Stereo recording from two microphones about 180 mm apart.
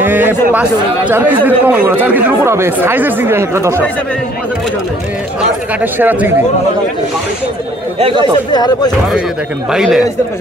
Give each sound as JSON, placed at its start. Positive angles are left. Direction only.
{"t": 0.0, "sound": "speech", "side_deg": -10}
{"t": 5.8, "sound": "speech", "side_deg": -10}
{"t": 8.5, "sound": "speech", "side_deg": 25}
{"t": 9.7, "sound": "speech", "side_deg": -5}